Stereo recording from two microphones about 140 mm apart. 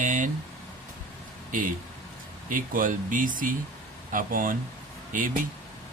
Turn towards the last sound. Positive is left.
turn(degrees=-70)  # may be behind; listen again after turning